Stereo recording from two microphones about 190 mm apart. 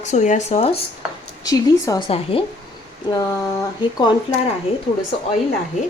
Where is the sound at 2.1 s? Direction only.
30° left (ahead or behind).